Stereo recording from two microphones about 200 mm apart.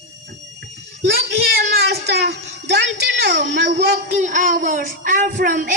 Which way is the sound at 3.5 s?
60° right (ahead or behind).